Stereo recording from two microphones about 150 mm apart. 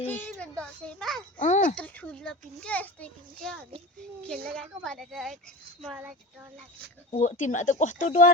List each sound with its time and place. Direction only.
0.0 s a child's voice: 10° left (ahead or behind)
1.4 s speech: 55° left (ahead or behind)
1.7 s a child's voice: 10° left (ahead or behind); by 6.1 s 5° right (ahead or behind)
7.1 s speech: 55° left (ahead or behind)